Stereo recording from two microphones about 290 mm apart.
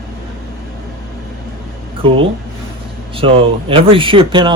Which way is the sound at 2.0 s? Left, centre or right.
Centre.